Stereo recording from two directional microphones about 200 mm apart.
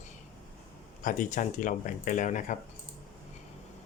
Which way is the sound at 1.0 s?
40° left (ahead or behind).